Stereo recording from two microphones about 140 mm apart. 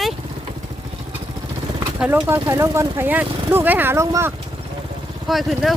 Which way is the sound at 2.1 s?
25° right (ahead or behind).